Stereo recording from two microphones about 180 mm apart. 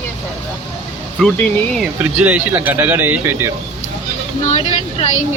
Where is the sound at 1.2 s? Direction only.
Centre (ahead or behind).